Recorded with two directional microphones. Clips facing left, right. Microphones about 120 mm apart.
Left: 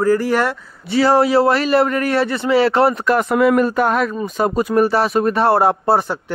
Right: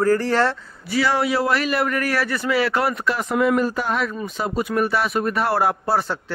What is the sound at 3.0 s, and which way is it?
Speech, 65° left (ahead or behind).